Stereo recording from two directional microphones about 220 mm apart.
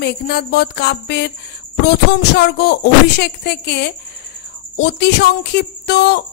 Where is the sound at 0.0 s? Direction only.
50° left (ahead or behind).